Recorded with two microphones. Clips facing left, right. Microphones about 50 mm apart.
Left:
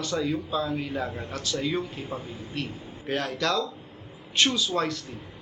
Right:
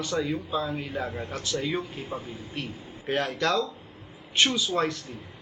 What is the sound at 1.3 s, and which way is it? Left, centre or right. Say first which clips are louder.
A man's voice: left 1 dB; centre.